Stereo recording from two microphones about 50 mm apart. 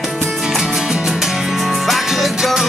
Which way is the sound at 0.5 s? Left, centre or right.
Centre.